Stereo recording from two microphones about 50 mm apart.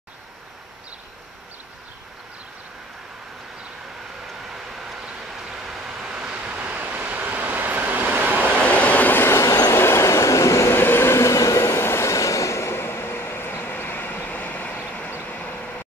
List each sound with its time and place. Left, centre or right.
4.7 s vehicle: centre; by 8.4 s right
8.4 s vehicle: left
9.3 s train: left
10.7 s train: left
12.7 s train: left
15.2 s vehicle: left